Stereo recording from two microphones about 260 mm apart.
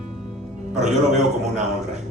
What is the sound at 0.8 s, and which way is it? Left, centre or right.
Speech, right.